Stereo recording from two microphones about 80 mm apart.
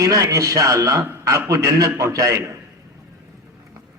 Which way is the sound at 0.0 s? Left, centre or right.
Right.